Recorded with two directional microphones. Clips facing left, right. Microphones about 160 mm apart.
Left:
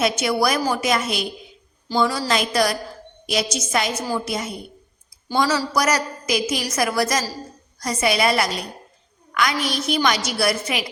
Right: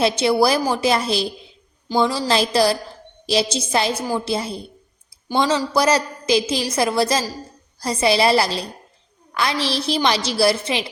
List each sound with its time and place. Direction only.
0.0 s a woman's voice: 30° right (ahead or behind)